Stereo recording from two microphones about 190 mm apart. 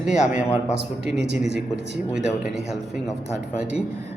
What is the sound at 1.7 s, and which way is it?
Speech, 5° right (ahead or behind).